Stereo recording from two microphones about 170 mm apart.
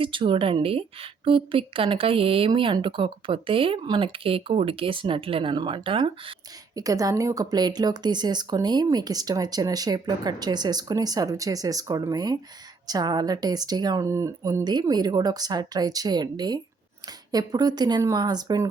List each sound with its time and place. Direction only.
0.0 s a woman's voice: 30° right (ahead or behind)
6.7 s speech: 20° right (ahead or behind)